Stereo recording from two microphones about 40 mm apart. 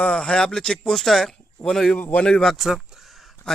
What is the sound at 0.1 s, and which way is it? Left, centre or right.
Speech, left.